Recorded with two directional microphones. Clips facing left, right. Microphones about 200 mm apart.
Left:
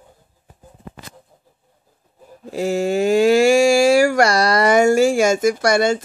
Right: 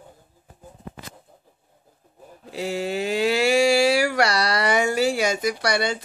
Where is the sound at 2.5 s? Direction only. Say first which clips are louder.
Left 7 dB; 45° left (ahead or behind).